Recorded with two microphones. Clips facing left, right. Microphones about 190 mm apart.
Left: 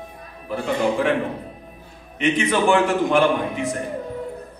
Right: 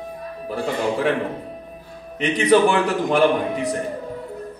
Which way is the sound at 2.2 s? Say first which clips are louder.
Right 4 dB; 35° right (ahead or behind).